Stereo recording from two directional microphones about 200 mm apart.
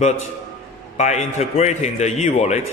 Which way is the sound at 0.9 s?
35° left (ahead or behind).